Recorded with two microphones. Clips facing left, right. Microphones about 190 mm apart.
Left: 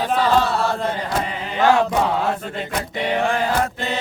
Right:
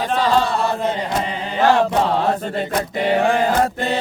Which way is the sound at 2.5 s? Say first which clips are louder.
Right 4 dB; 40° right (ahead or behind).